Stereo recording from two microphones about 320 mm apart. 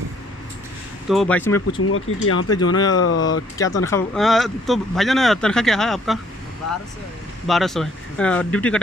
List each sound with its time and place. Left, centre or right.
1.0 s speech: centre
1.8 s speech: left
2.5 s speech: centre
3.0 s speech: left
3.8 s speech: centre
7.4 s speech: centre